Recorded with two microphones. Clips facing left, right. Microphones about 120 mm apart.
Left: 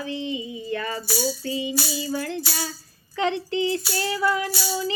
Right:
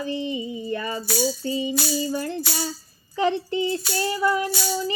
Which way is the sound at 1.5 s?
40° right (ahead or behind).